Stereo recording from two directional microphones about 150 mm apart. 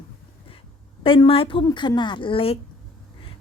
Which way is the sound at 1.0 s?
35° left (ahead or behind).